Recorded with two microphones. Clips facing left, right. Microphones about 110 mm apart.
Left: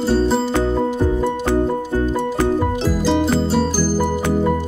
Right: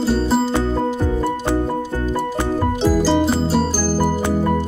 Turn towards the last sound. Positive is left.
turn(degrees=-5)  # may be behind; listen again after turning